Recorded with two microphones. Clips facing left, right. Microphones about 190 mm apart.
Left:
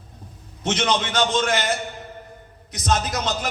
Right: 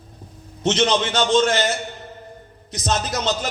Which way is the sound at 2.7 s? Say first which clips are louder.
Left 1 dB; 30° right (ahead or behind).